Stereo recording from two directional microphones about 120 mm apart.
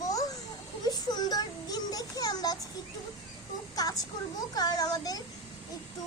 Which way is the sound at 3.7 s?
30° left (ahead or behind).